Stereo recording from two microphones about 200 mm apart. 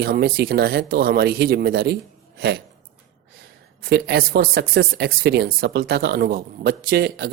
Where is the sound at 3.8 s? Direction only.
55° right (ahead or behind).